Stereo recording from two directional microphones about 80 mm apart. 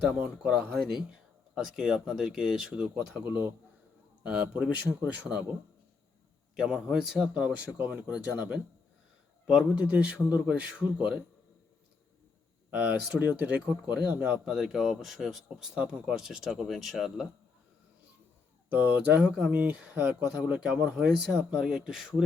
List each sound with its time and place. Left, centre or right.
0.2 s speech: centre
2.9 s speech: centre
6.6 s speech: centre
12.7 s speech: centre
18.7 s speech: right
19.2 s speech: centre
19.5 s speech: centre